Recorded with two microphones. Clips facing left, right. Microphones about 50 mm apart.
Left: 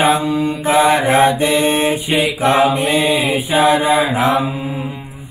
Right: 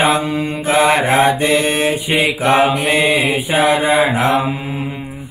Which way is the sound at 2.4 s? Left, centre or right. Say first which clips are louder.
Left 1 dB; right.